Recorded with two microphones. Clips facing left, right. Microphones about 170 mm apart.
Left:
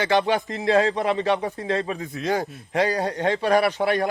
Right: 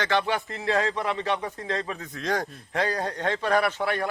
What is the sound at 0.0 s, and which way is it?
A man's voice, 15° left (ahead or behind).